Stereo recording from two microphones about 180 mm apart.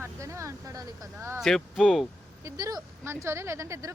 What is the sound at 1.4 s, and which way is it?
Speech, centre (ahead or behind).